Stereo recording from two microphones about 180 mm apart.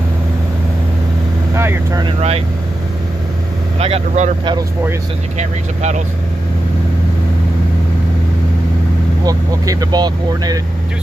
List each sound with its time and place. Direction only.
1.5 s vehicle: 15° right (ahead or behind)
2.0 s speech: 35° right (ahead or behind)
3.8 s speech: 35° right (ahead or behind)
5.4 s speech: 40° right (ahead or behind)
9.2 s speech: 20° right (ahead or behind)